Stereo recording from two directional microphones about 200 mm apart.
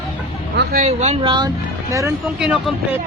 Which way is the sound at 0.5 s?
55° right (ahead or behind).